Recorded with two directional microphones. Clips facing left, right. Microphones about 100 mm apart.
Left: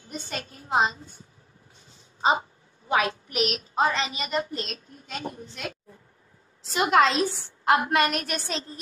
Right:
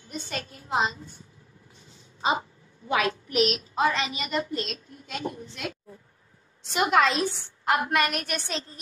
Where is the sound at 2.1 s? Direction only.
30° left (ahead or behind).